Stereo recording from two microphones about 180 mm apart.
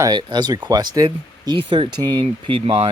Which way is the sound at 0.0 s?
25° right (ahead or behind).